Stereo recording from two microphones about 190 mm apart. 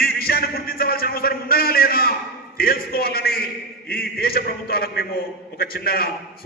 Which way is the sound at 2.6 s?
50° left (ahead or behind).